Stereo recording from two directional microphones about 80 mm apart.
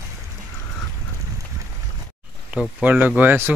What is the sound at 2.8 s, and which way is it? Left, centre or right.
Speech, centre.